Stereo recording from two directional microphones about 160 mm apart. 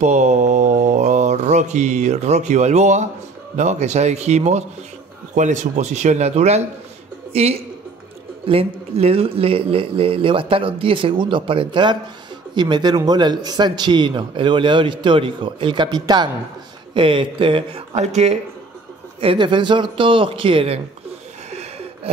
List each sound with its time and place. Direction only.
0.0 s mantra: 45° right (ahead or behind)
3.5 s speech: 45° right (ahead or behind)
17.9 s speech: 45° right (ahead or behind)
19.2 s speech: 30° right (ahead or behind)
21.5 s a sound: 40° right (ahead or behind)